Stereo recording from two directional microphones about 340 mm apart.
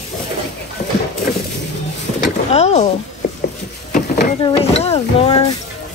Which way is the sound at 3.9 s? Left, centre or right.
Left.